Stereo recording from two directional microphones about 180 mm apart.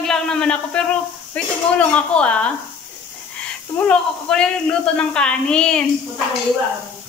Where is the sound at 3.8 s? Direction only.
5° left (ahead or behind).